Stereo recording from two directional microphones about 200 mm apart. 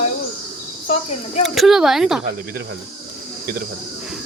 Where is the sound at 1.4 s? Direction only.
Centre (ahead or behind).